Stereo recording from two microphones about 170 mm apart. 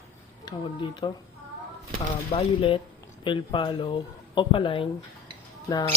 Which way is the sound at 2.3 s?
35° left (ahead or behind).